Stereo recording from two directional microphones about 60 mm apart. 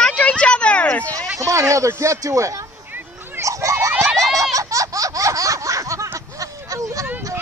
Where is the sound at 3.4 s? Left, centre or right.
Right.